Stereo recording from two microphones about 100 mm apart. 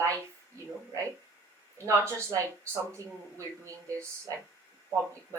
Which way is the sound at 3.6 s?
30° right (ahead or behind).